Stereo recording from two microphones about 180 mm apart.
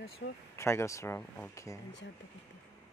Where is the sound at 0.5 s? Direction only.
15° left (ahead or behind).